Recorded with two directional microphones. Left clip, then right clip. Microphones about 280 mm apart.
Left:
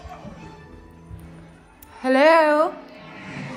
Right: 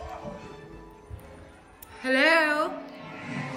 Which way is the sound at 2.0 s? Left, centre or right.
Centre.